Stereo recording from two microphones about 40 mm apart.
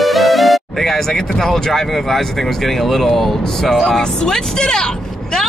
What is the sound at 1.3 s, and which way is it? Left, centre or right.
Speech, centre.